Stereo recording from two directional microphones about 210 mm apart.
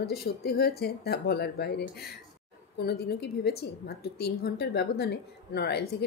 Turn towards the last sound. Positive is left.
turn(degrees=50)  # may be behind; listen again after turning